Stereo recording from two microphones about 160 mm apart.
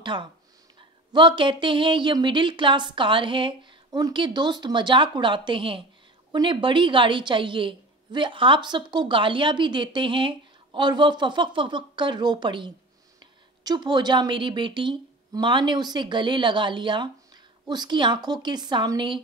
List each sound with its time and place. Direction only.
0.0 s a woman's voice: 30° right (ahead or behind)